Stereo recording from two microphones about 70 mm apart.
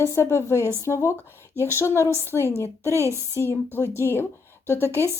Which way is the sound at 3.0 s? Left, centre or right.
Right.